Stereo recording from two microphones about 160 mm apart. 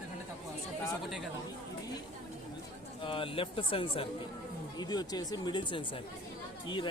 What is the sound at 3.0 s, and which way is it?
Speech, 35° left (ahead or behind).